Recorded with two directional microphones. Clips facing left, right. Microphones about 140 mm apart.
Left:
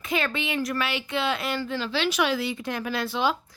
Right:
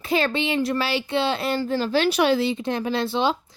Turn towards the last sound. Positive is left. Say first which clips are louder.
# right 3 dB
turn(degrees=-30)  # may be behind; listen again after turning